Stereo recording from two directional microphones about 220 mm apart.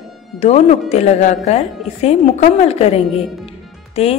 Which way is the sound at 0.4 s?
30° left (ahead or behind).